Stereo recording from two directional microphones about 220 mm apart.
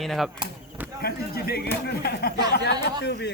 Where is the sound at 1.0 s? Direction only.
45° left (ahead or behind).